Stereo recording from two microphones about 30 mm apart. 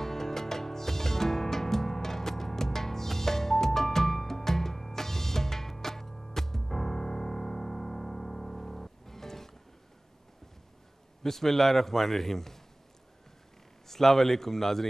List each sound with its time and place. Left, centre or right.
0.0 s music: centre
11.2 s a man's voice: centre
13.8 s a man's voice: centre